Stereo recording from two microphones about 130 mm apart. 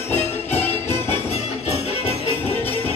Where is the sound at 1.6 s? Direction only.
50° left (ahead or behind).